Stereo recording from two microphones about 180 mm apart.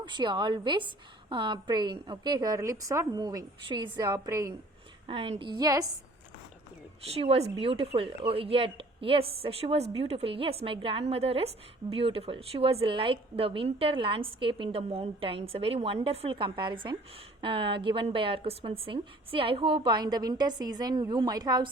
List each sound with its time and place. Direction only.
0.0 s a woman's voice: 25° right (ahead or behind)
5.0 s a woman's voice: 30° right (ahead or behind)
7.1 s a woman's voice: 35° right (ahead or behind)